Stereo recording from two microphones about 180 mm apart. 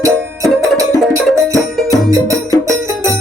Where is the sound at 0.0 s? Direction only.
15° right (ahead or behind).